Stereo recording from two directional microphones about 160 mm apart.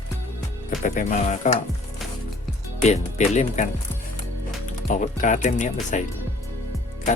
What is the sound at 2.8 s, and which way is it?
Speech, 45° left (ahead or behind).